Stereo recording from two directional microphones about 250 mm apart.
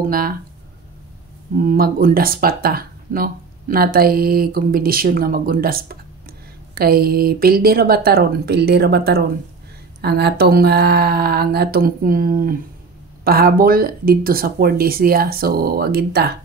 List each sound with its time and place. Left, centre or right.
0.0 s speech: right
1.6 s speech: right